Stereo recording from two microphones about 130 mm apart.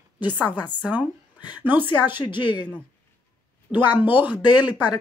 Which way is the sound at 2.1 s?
40° left (ahead or behind).